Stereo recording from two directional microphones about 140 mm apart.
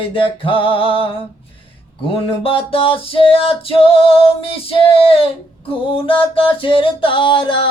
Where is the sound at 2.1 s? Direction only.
40° left (ahead or behind).